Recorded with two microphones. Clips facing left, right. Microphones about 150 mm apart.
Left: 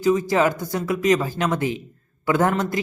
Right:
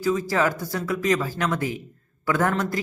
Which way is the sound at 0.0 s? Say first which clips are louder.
Left 4 dB; 20° left (ahead or behind).